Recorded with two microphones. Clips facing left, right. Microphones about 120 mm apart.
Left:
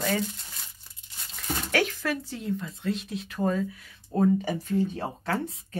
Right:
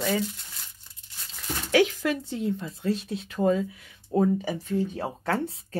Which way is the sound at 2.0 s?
20° right (ahead or behind).